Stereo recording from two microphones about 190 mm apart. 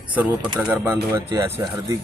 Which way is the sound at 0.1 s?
10° right (ahead or behind).